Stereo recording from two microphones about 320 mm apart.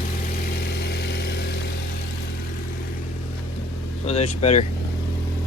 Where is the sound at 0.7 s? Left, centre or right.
Left.